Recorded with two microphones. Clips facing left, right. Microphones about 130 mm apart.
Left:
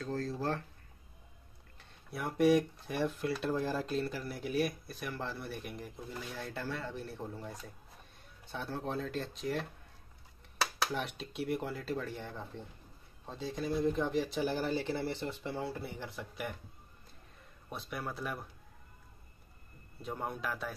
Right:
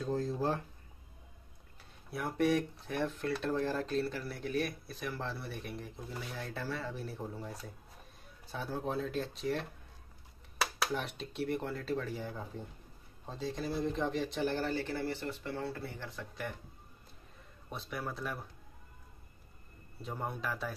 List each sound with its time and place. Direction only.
0.0 s speech: 15° right (ahead or behind)
1.8 s speech: centre (ahead or behind)
10.8 s speech: centre (ahead or behind)
17.6 s speech: centre (ahead or behind)
20.0 s speech: centre (ahead or behind)